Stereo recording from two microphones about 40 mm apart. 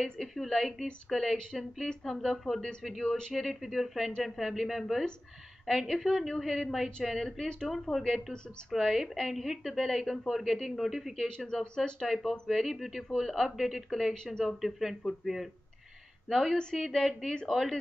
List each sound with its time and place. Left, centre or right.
0.2 s speech: centre
3.3 s a woman's voice: centre
7.1 s speech: centre
8.7 s a woman's voice: centre
11.2 s speech: centre
12.0 s speech: centre
13.1 s speech: centre
14.1 s speech: centre
14.4 s speech: centre